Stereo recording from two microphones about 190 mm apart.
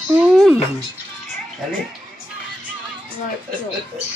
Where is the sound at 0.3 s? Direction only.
Centre (ahead or behind).